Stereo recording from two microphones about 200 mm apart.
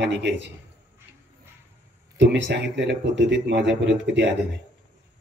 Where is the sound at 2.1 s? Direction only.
60° right (ahead or behind).